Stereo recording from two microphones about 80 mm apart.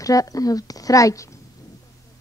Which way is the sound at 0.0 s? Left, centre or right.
Left.